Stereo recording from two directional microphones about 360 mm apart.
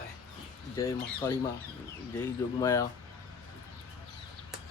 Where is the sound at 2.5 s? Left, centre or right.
Centre.